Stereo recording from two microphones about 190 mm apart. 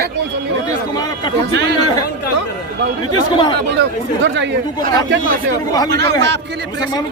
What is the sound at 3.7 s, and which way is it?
Speech, 70° right (ahead or behind).